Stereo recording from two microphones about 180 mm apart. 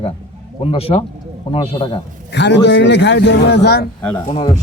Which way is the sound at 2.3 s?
75° left (ahead or behind).